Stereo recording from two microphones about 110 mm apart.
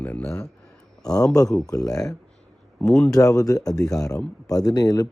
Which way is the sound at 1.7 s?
35° left (ahead or behind).